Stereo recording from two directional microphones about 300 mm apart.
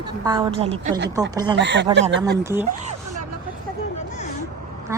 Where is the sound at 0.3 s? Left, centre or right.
Centre.